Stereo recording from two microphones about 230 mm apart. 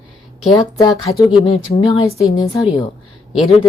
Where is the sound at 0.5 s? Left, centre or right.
Centre.